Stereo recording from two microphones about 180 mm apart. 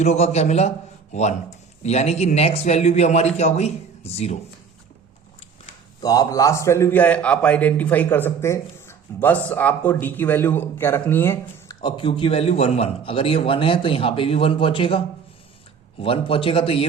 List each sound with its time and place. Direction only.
0.0 s a man's voice: 40° left (ahead or behind)
6.0 s a man's voice: 20° left (ahead or behind)
11.8 s a man's voice: 25° left (ahead or behind)